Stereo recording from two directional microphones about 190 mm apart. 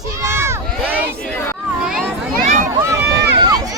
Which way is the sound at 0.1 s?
15° right (ahead or behind).